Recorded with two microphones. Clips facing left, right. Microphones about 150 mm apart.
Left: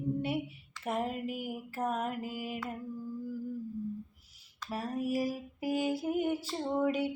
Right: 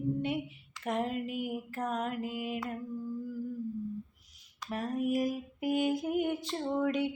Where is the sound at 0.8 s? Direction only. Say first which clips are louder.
Right 1 dB; 5° left (ahead or behind).